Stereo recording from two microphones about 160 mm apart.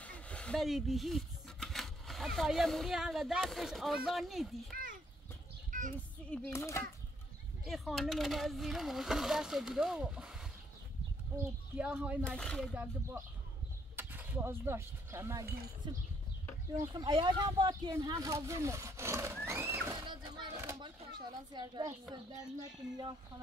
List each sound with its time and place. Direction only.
0.0 s speech: 10° left (ahead or behind)
4.7 s a sound: 60° right (ahead or behind)
5.7 s child singing: 55° right (ahead or behind)
6.3 s a child's voice: 15° left (ahead or behind)
7.6 s speech: centre (ahead or behind)
11.7 s speech: 10° right (ahead or behind)
12.3 s speech: 5° left (ahead or behind)
13.9 s speech: 10° right (ahead or behind)
20.1 s a sound: 25° right (ahead or behind)
22.6 s speech: 25° right (ahead or behind)